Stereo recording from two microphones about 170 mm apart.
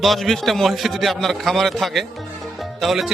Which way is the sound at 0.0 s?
Centre (ahead or behind).